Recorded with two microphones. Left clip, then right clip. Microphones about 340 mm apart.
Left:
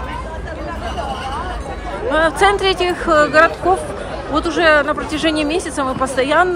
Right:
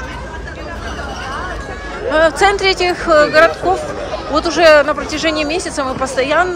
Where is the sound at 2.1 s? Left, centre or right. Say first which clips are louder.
Right 2 dB; centre.